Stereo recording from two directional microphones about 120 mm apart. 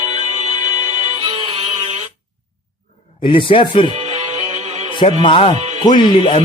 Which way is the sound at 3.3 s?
45° left (ahead or behind).